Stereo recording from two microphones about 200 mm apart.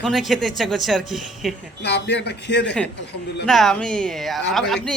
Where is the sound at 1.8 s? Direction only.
60° left (ahead or behind).